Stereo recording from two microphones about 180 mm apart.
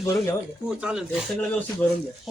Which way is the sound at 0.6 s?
5° right (ahead or behind).